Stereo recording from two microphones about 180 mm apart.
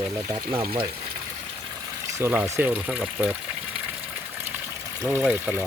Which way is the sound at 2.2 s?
10° right (ahead or behind).